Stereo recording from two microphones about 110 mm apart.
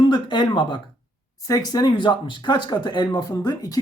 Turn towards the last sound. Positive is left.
turn(degrees=35)  # may be behind; listen again after turning